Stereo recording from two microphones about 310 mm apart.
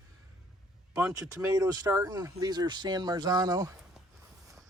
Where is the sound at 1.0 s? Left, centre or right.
Centre.